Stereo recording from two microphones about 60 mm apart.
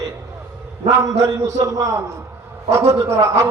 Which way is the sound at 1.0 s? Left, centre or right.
Right.